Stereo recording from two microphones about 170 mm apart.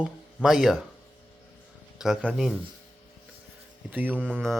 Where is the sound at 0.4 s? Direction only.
Centre (ahead or behind).